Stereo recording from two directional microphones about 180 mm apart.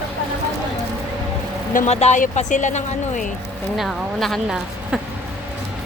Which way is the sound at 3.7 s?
Centre (ahead or behind).